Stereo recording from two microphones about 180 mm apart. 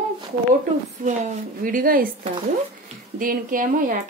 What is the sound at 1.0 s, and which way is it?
A woman's voice, 45° right (ahead or behind).